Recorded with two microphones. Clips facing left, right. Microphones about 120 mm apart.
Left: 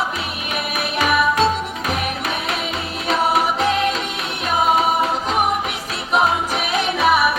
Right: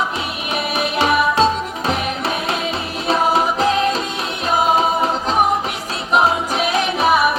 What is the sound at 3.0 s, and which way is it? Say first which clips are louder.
Music: right 2 dB; 30° right (ahead or behind).